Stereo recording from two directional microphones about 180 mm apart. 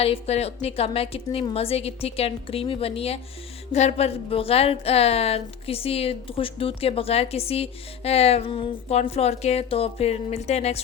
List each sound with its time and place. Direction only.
0.0 s a woman's voice: 35° left (ahead or behind)